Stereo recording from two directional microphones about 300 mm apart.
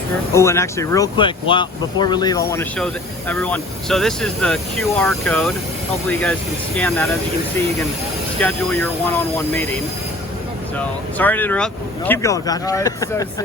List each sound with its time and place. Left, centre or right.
0.3 s speech: centre
8.4 s speech: centre
10.8 s speech: centre